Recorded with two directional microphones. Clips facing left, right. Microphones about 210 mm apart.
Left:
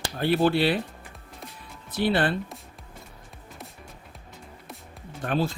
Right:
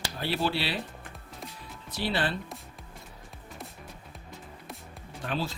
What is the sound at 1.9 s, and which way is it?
Speech, 55° left (ahead or behind).